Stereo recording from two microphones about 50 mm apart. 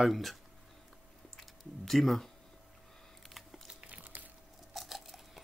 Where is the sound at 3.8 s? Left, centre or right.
Right.